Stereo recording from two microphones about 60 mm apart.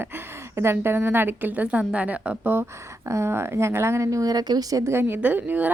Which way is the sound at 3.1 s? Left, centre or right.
Right.